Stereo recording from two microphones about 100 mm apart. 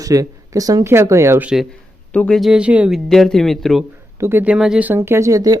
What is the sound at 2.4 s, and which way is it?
Speech, 10° right (ahead or behind).